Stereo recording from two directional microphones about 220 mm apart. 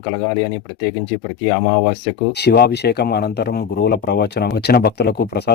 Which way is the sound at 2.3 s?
50° left (ahead or behind).